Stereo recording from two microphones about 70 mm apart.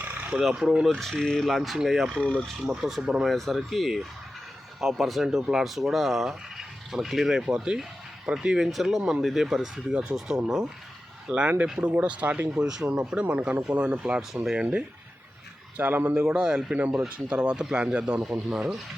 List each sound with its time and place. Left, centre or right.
0.0 s a sound: right
0.3 s speech: centre
0.9 s speech: centre
12.5 s speech: centre
15.8 s speech: right
16.1 s speech: centre